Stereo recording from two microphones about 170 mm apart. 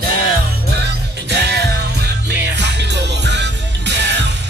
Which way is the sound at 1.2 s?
80° right.